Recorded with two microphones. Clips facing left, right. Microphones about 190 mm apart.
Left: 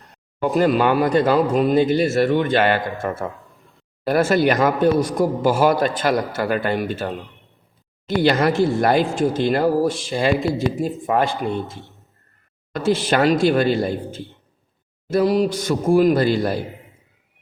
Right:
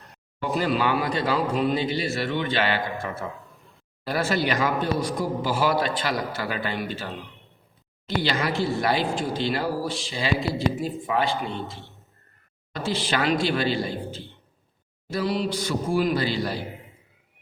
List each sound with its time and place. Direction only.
0.4 s speech: 45° left (ahead or behind)